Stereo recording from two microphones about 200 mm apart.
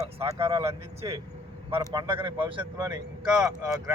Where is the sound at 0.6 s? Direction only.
15° right (ahead or behind).